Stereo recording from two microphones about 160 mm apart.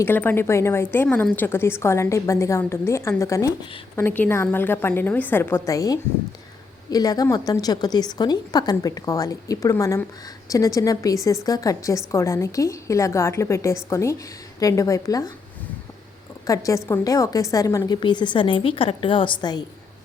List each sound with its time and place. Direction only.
0.0 s a woman's voice: 10° left (ahead or behind)
16.5 s a woman's voice: 20° left (ahead or behind)